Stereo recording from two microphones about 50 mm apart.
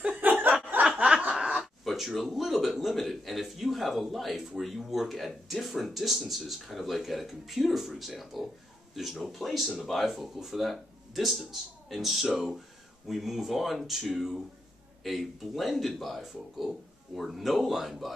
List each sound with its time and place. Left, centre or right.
0.2 s chuckle: right
1.9 s speech: centre